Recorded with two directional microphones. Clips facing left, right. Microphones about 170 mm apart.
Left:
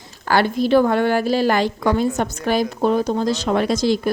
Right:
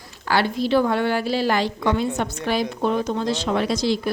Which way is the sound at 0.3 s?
45° left (ahead or behind).